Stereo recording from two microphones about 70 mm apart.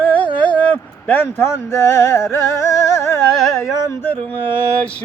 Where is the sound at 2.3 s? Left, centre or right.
Left.